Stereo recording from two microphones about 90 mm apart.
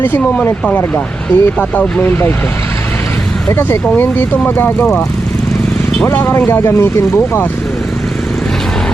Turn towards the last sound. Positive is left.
turn(degrees=25)  # may be behind; listen again after turning